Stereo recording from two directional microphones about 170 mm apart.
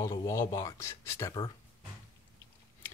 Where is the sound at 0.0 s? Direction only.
20° left (ahead or behind).